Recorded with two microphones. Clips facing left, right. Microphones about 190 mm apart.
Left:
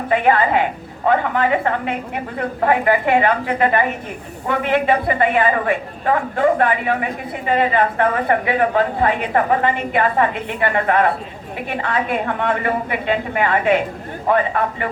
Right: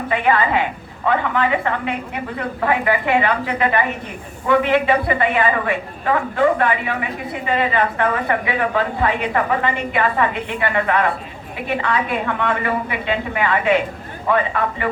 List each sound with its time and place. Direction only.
0.1 s a woman's voice: 45° left (ahead or behind)